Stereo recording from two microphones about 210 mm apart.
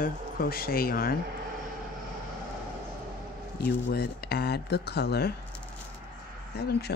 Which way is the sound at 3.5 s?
50° left (ahead or behind).